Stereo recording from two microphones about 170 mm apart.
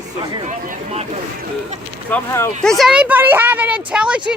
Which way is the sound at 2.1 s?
15° left (ahead or behind).